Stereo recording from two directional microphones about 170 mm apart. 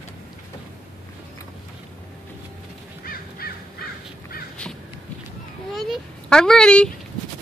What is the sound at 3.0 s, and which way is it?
Crow, 60° left (ahead or behind).